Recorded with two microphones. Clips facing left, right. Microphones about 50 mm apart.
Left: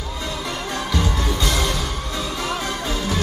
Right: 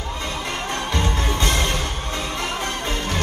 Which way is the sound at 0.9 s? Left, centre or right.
Right.